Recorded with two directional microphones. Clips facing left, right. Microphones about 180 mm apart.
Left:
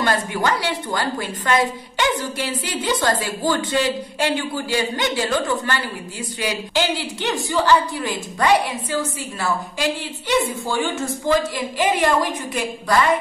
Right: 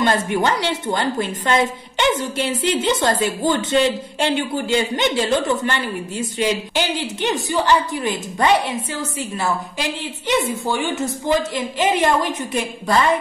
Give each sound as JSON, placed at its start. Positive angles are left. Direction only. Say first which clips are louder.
{"t": 0.0, "sound": "a woman's voice", "louder": "right 3 dB", "side_deg": -25}